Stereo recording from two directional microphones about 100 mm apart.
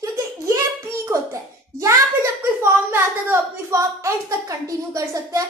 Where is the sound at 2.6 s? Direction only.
25° right (ahead or behind).